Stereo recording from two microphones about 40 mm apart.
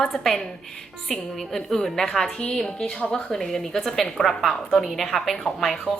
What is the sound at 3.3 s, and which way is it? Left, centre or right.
A woman's voice, centre.